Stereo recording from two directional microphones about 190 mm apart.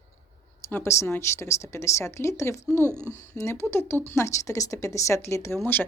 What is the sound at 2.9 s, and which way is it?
Speech, 10° right (ahead or behind).